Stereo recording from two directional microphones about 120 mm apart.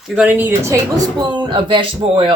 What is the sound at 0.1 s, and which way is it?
Speech, 10° right (ahead or behind).